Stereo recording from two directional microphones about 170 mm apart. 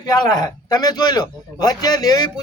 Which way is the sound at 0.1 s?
25° left (ahead or behind).